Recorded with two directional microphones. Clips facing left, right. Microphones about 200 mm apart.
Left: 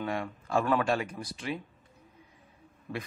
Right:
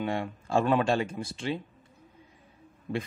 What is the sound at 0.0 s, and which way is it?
Speech, 25° right (ahead or behind).